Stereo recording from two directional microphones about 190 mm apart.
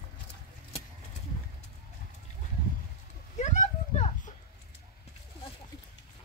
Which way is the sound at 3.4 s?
40° left (ahead or behind).